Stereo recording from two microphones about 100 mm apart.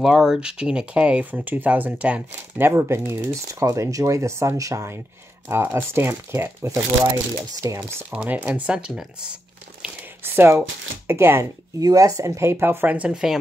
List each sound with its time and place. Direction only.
0.0 s speech: 5° right (ahead or behind); by 7.8 s 35° right (ahead or behind)
8.1 s speech: 15° right (ahead or behind)
10.2 s speech: 25° right (ahead or behind)
11.8 s speech: 35° right (ahead or behind); by 13.4 s 5° right (ahead or behind)